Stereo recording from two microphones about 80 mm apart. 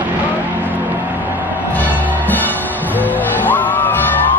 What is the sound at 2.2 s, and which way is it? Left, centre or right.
Music, left.